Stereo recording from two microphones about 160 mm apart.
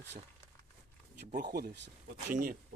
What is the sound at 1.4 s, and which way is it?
Speech, 80° right.